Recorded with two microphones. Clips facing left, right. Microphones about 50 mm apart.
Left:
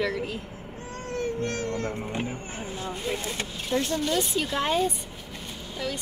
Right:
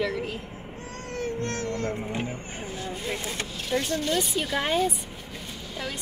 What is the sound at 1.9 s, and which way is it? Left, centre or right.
Speech, centre.